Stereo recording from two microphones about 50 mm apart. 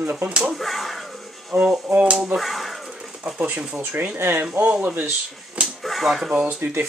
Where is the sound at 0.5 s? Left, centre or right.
Centre.